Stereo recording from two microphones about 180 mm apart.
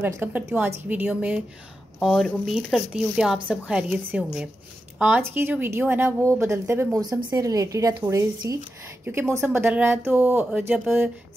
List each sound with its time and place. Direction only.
0.0 s speech: 15° right (ahead or behind)